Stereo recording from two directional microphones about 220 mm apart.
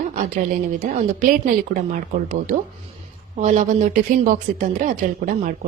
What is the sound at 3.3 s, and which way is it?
Speech, 35° right (ahead or behind).